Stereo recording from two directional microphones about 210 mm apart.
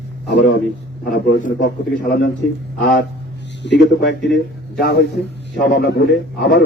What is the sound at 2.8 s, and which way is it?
A man's voice, 55° left (ahead or behind).